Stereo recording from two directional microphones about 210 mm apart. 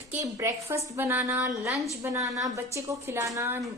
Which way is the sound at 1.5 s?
Centre (ahead or behind).